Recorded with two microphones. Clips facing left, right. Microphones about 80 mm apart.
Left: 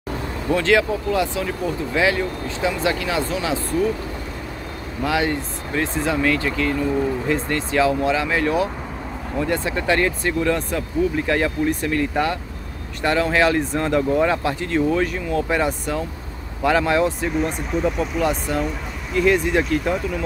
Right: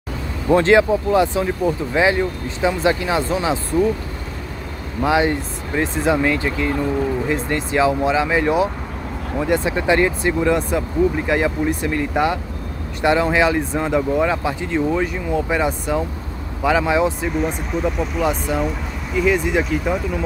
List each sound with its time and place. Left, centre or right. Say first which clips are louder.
0.5 s speech: right 5 dB; right
5.0 s speech: right 4 dB; right; by 20.2 s centre